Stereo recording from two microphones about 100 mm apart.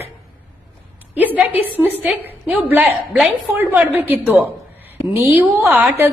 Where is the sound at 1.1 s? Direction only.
15° right (ahead or behind).